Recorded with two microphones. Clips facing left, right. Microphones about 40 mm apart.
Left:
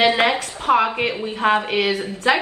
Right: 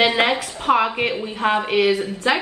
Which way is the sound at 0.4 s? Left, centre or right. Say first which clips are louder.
Left 1 dB; centre.